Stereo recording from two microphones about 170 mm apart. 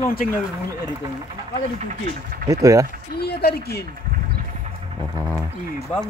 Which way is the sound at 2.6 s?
20° right (ahead or behind).